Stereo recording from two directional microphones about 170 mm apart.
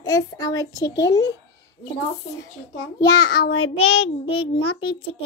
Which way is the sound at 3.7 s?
35° left (ahead or behind).